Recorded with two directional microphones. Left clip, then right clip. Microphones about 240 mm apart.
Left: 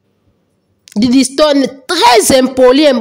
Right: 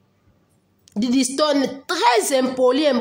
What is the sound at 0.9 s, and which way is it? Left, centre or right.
A woman's voice, left.